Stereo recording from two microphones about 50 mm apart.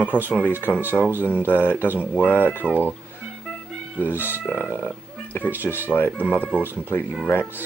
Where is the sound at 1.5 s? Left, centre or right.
Left.